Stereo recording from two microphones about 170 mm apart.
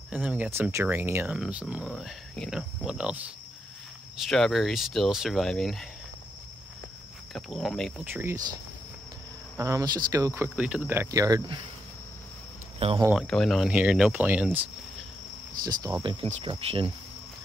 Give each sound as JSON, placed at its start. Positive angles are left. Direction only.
{"t": 0.1, "sound": "speech", "side_deg": -5}
{"t": 4.3, "sound": "speech", "side_deg": 0}
{"t": 7.3, "sound": "speech", "side_deg": 0}
{"t": 8.0, "sound": "speech", "side_deg": -10}
{"t": 9.6, "sound": "speech", "side_deg": -20}
{"t": 12.7, "sound": "speech", "side_deg": -35}
{"t": 13.1, "sound": "speech", "side_deg": 5}
{"t": 15.6, "sound": "cricket", "side_deg": -20}
{"t": 16.4, "sound": "speech", "side_deg": -30}